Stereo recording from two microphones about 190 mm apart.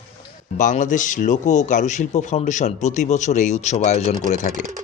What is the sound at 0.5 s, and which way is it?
Speech, 40° left (ahead or behind).